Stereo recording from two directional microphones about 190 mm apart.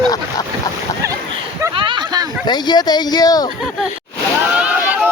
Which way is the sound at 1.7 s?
25° right (ahead or behind).